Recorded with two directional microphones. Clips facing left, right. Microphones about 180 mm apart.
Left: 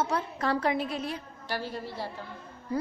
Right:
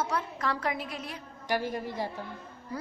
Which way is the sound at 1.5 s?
15° right (ahead or behind).